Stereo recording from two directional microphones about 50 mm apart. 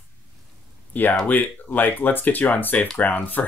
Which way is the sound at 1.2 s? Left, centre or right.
Left.